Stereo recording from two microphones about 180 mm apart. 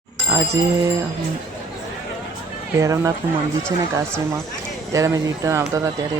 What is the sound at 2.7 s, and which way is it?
Speech, 15° right (ahead or behind).